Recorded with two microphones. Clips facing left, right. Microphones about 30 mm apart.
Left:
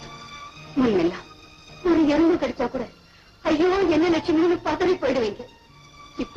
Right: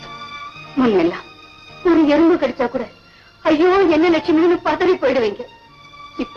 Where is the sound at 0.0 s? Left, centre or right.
Right.